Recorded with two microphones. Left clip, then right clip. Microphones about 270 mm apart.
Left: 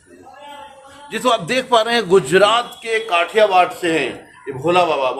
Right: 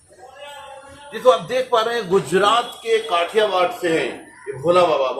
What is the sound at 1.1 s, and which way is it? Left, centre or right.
Speech, left.